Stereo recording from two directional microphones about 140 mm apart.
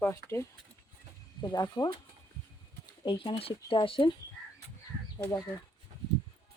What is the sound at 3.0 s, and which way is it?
Speech, 40° left (ahead or behind).